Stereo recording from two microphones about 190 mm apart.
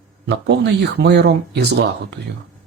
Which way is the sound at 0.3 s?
60° right (ahead or behind).